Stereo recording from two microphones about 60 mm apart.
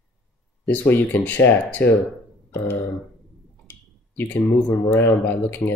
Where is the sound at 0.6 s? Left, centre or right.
Left.